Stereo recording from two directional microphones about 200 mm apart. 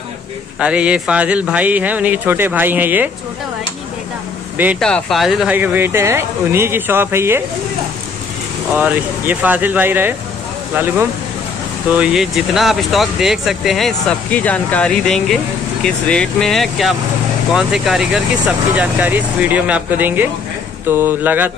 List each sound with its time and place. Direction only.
0.6 s speech: 5° right (ahead or behind)
4.7 s speech: 5° left (ahead or behind); by 7.4 s 10° right (ahead or behind)
8.7 s speech: 10° right (ahead or behind)